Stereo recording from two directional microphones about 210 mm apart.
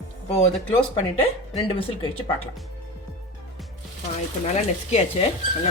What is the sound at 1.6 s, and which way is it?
Speech, 25° left (ahead or behind).